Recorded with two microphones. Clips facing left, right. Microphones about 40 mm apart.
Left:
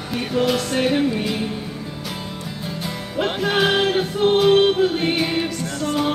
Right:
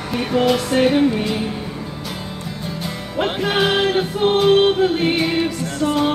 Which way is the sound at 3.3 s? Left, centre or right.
Centre.